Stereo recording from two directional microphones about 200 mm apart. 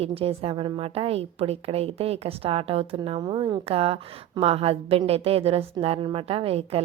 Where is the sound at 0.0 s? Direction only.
30° right (ahead or behind).